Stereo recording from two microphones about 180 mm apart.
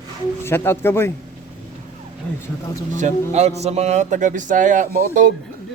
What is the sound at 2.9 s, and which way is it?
A man's voice, 40° right (ahead or behind).